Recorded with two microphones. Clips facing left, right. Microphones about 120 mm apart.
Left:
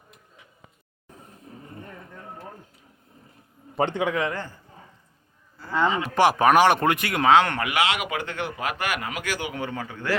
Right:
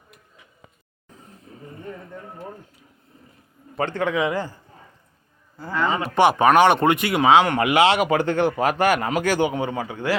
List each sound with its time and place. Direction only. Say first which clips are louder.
3.8 s a man's voice: left 1 dB; 25° left (ahead or behind)
4.1 s a man's voice: right 4 dB; 10° right (ahead or behind)
6.1 s speech: right 2 dB; centre (ahead or behind)
7.6 s speech: right 7 dB; 25° right (ahead or behind)
9.6 s a man's voice: right 5 dB; 20° right (ahead or behind)